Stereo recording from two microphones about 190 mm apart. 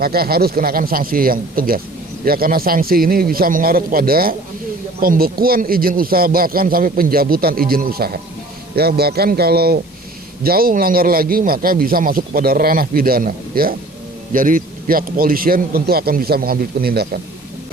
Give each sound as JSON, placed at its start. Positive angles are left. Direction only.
{"t": 0.0, "sound": "a man's voice", "side_deg": -55}